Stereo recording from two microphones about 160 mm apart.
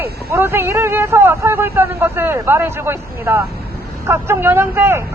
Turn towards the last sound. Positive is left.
turn(degrees=-15)  # may be behind; listen again after turning